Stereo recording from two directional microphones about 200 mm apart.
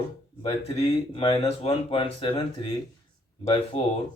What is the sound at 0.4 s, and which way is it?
Speech, 25° left (ahead or behind).